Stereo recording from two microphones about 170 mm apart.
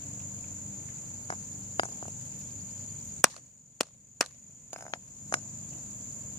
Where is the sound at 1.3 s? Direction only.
30° left (ahead or behind).